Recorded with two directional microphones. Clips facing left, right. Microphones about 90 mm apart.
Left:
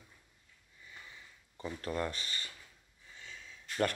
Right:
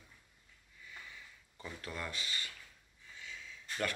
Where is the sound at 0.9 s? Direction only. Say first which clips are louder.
Right 1 dB; 30° left (ahead or behind).